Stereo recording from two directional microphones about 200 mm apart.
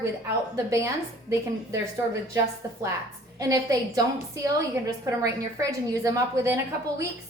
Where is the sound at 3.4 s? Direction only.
15° right (ahead or behind).